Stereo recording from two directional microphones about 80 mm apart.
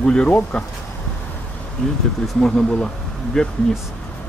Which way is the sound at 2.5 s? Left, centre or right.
Centre.